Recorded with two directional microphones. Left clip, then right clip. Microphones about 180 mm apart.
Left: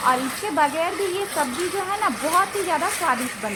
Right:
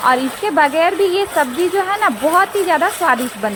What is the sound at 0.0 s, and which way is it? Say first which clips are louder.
A woman's voice: right 6 dB; 30° right (ahead or behind).